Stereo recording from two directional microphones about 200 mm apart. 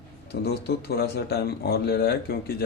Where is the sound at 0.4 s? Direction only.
55° left (ahead or behind).